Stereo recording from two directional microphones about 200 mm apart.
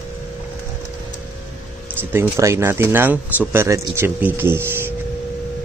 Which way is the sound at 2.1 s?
15° right (ahead or behind).